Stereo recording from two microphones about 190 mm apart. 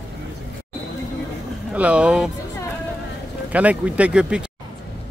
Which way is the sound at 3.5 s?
5° right (ahead or behind).